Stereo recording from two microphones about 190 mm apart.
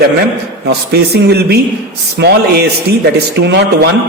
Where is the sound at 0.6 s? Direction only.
60° right (ahead or behind).